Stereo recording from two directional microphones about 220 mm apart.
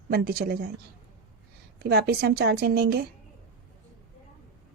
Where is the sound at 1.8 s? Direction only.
45° right (ahead or behind).